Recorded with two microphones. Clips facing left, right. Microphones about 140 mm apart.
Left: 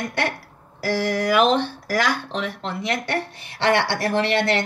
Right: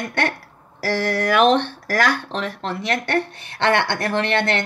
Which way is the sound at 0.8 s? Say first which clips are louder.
Right 1 dB; 15° left (ahead or behind).